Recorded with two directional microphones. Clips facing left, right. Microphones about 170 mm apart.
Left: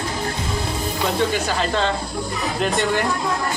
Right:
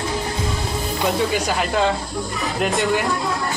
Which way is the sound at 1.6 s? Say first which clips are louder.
Right 1 dB; 10° right (ahead or behind).